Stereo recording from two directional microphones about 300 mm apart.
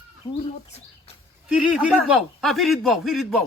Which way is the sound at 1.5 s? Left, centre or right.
Centre.